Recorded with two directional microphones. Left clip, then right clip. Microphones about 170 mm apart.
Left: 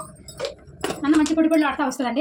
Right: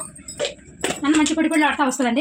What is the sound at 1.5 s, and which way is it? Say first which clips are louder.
Speech: right 2 dB; 40° right (ahead or behind).